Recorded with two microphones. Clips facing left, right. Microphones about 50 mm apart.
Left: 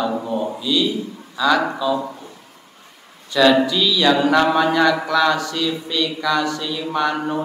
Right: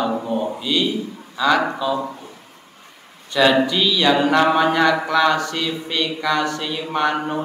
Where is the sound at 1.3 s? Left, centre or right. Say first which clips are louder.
Even; centre.